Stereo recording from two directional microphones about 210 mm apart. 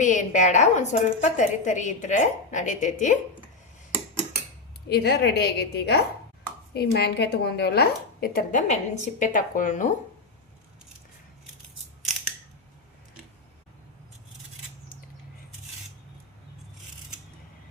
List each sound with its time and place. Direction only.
0.0 s a woman's voice: 35° left (ahead or behind)
4.9 s a woman's voice: 50° left (ahead or behind)